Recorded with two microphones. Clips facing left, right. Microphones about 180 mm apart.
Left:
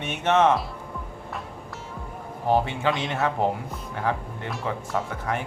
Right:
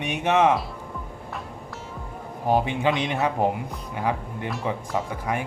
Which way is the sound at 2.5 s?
15° right (ahead or behind).